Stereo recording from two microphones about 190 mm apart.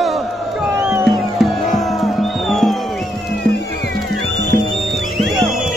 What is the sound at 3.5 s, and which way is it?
Music, 65° left (ahead or behind).